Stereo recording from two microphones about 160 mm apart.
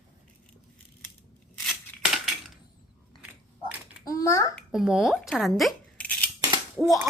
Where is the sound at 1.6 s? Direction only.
Centre (ahead or behind).